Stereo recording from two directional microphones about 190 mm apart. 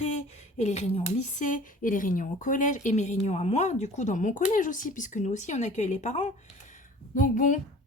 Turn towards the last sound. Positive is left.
turn(degrees=40)  # may be behind; listen again after turning